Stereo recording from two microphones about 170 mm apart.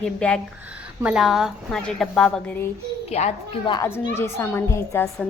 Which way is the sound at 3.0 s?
40° left (ahead or behind).